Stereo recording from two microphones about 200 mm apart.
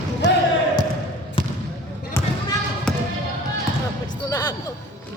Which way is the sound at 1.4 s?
25° left (ahead or behind).